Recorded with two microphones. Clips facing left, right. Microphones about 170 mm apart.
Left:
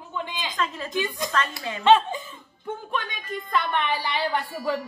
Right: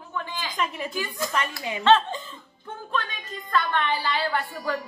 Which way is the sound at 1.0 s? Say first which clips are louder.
Left 1 dB; 20° left (ahead or behind).